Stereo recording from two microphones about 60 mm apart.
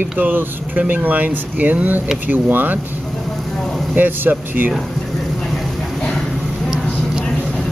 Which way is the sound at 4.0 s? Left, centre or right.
Right.